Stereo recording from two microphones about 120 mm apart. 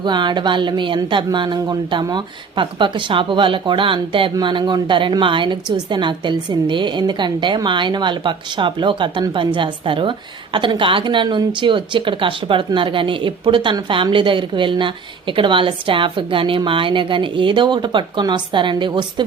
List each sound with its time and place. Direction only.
0.0 s a woman's voice: 40° right (ahead or behind)